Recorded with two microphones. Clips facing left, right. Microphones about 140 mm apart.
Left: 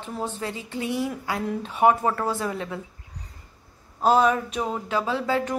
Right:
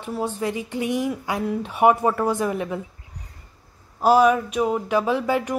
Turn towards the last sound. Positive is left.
turn(degrees=-15)  # may be behind; listen again after turning